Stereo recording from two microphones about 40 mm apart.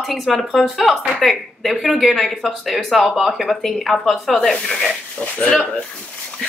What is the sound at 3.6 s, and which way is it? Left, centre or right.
Speech, centre.